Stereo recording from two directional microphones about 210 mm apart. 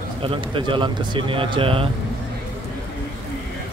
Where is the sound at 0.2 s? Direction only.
25° right (ahead or behind).